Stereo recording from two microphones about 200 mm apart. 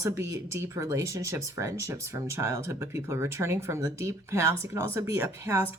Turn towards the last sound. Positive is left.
turn(degrees=-10)  # may be behind; listen again after turning